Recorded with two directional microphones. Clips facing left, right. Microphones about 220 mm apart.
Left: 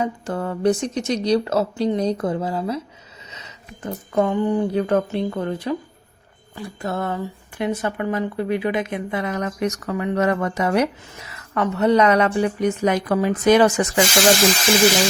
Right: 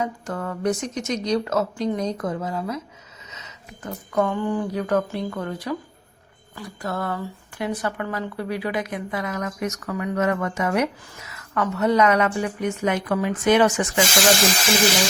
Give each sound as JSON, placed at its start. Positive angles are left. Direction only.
{"t": 0.0, "sound": "speech", "side_deg": 30}